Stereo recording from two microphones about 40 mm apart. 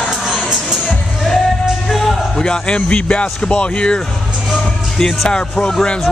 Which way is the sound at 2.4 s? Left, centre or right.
Left.